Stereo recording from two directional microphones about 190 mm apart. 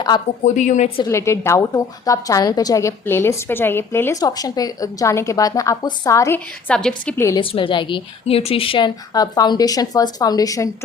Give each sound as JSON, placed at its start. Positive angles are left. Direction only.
{"t": 0.4, "sound": "a woman's voice", "side_deg": 40}
{"t": 1.0, "sound": "a woman's voice", "side_deg": 15}
{"t": 7.3, "sound": "a woman's voice", "side_deg": 25}